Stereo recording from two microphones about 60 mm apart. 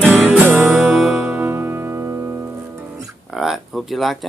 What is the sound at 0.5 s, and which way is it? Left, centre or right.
Music, centre.